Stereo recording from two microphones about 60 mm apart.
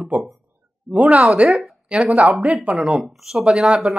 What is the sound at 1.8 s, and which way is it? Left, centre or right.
Speech, centre.